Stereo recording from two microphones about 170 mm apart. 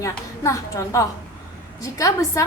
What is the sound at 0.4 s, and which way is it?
A woman's voice, 20° left (ahead or behind).